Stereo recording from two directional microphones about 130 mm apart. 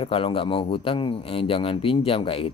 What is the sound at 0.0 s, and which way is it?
Speech, 45° left (ahead or behind).